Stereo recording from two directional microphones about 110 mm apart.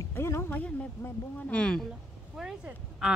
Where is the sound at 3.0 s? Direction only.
5° right (ahead or behind).